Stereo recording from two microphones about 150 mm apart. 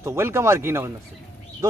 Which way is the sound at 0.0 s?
15° right (ahead or behind).